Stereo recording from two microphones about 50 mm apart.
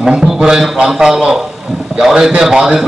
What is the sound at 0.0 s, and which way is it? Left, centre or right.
A man's voice, centre.